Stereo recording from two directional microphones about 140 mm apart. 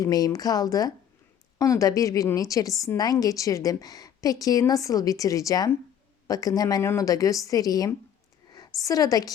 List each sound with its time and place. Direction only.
0.0 s a woman's voice: 25° left (ahead or behind)